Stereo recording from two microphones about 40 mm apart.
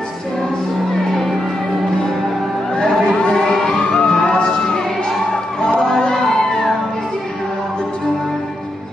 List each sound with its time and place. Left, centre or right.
1.1 s music: centre
3.3 s music: centre